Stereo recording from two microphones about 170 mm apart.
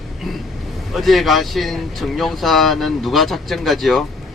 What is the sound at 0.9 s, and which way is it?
Speech, centre (ahead or behind).